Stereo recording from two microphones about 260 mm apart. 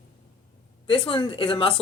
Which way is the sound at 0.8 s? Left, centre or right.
Centre.